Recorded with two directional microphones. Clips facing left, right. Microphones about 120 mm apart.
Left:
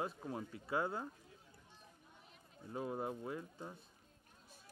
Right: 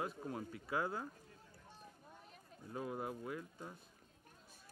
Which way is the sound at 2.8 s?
25° left (ahead or behind).